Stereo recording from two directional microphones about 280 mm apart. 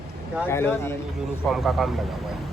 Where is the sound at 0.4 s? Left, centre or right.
Centre.